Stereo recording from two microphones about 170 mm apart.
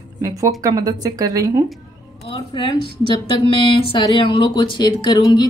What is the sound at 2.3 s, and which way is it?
Speech, 30° left (ahead or behind).